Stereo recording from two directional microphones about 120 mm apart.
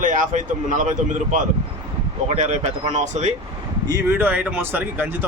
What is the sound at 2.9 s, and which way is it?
Speech, 75° right (ahead or behind).